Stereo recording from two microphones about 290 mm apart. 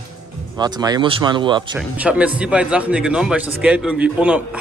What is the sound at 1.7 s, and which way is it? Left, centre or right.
Speech, centre.